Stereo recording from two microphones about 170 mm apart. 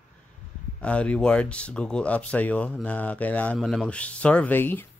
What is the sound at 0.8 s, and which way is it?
Speech, 5° left (ahead or behind).